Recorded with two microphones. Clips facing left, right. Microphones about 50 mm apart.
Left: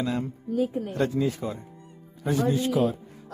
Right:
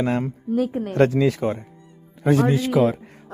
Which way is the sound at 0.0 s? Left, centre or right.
Right.